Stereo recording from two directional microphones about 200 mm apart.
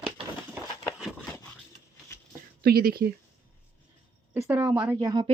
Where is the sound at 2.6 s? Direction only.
50° right (ahead or behind).